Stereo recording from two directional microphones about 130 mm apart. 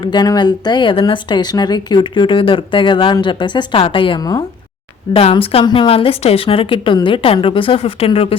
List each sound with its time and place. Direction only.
0.0 s speech: 35° left (ahead or behind)
5.1 s a woman's voice: 45° left (ahead or behind)